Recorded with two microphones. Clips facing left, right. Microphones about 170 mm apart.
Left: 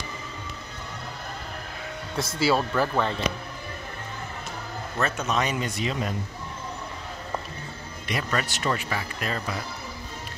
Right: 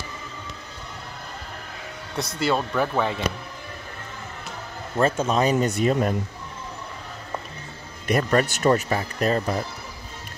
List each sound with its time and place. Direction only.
2.1 s speech: centre (ahead or behind)
4.9 s speech: 30° right (ahead or behind); by 6.1 s 50° right (ahead or behind)
8.1 s speech: 45° right (ahead or behind)